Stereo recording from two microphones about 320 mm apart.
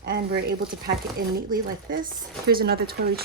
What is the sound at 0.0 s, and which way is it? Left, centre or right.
Speech, right.